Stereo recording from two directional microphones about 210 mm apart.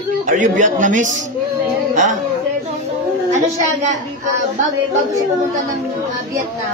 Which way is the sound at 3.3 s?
35° right (ahead or behind).